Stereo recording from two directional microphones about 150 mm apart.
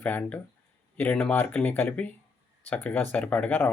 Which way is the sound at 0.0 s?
10° left (ahead or behind).